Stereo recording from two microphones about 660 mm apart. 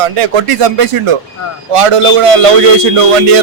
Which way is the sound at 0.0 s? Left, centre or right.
Right.